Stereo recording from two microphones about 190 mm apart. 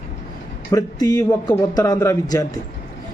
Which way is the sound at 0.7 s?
20° left (ahead or behind).